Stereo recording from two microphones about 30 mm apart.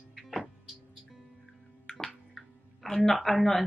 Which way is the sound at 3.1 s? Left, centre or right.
Centre.